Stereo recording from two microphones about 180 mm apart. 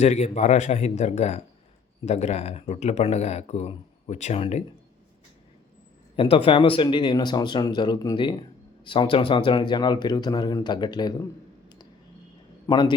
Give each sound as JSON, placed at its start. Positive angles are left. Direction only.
{"t": 0.0, "sound": "speech", "side_deg": 40}
{"t": 6.1, "sound": "speech", "side_deg": 30}
{"t": 12.6, "sound": "a man's voice", "side_deg": 25}